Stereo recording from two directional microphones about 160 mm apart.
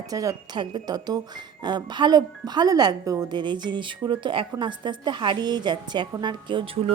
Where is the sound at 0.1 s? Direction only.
20° right (ahead or behind).